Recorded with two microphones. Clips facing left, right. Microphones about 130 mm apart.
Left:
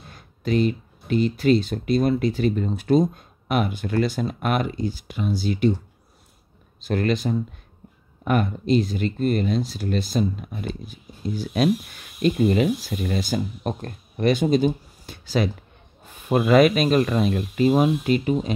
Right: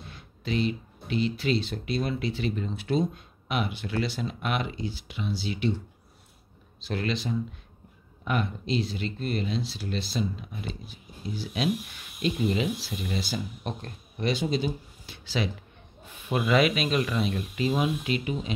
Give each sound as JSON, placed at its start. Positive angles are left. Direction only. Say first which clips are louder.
{"t": 0.1, "sound": "speech", "louder": "left 7 dB", "side_deg": 45}
{"t": 6.8, "sound": "speech", "louder": "left 7 dB", "side_deg": 50}